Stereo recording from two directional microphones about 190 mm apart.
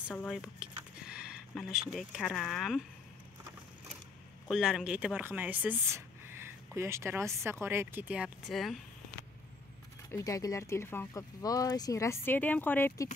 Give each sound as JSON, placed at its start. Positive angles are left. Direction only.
{"t": 0.1, "sound": "a sound", "side_deg": 5}
{"t": 1.5, "sound": "speech", "side_deg": 0}
{"t": 4.5, "sound": "speech", "side_deg": -5}
{"t": 10.1, "sound": "speech", "side_deg": 20}